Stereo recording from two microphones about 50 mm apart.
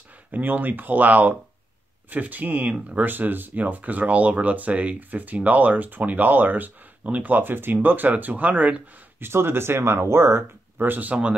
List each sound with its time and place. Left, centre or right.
0.3 s speech: right
3.1 s speech: right
9.2 s speech: right
10.8 s speech: right